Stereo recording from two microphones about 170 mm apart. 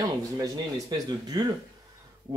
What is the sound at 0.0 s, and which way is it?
Speech, 20° right (ahead or behind).